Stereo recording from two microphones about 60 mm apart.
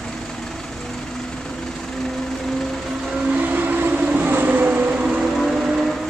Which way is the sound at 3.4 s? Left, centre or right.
Right.